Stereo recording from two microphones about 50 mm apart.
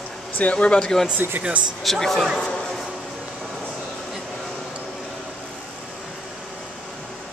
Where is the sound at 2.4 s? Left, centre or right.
Centre.